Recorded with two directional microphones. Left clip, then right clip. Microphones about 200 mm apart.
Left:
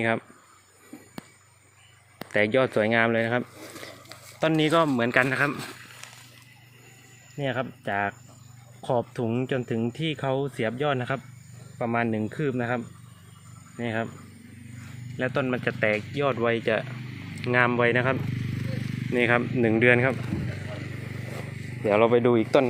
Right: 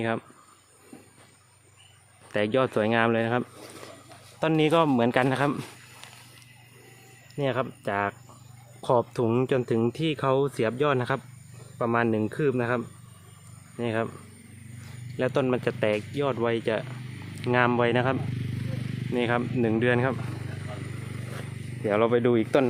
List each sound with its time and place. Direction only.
2.3 s speech: 10° right (ahead or behind); by 5.5 s 25° right (ahead or behind)
7.3 s speech: 20° right (ahead or behind)
15.2 s speech: 25° right (ahead or behind)
19.1 s speech: centre (ahead or behind)
21.8 s speech: 10° right (ahead or behind)